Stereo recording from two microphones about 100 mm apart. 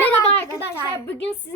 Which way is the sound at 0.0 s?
25° left (ahead or behind).